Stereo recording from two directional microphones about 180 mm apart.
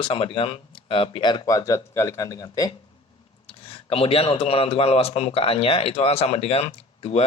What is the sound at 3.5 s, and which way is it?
A man's voice, 30° left (ahead or behind).